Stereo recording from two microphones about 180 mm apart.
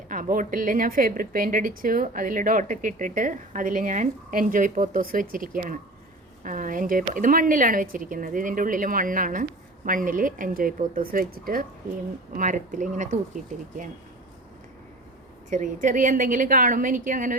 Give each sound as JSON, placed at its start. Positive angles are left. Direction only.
{"t": 0.1, "sound": "a woman's voice", "side_deg": -50}
{"t": 15.4, "sound": "a woman's voice", "side_deg": -45}